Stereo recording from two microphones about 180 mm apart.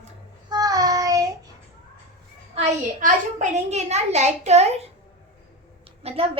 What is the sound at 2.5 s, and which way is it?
A child's voice, 40° right (ahead or behind).